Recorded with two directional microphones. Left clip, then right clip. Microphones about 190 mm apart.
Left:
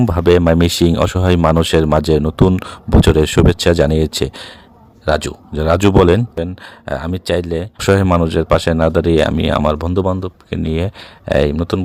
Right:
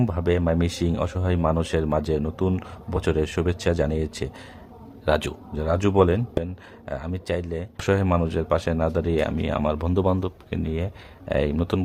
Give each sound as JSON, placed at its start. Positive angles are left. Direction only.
{"t": 0.0, "sound": "speech", "side_deg": 45}
{"t": 5.0, "sound": "a man's voice", "side_deg": 30}
{"t": 5.5, "sound": "speech", "side_deg": 50}
{"t": 10.5, "sound": "speech", "side_deg": 45}
{"t": 11.5, "sound": "speech", "side_deg": 30}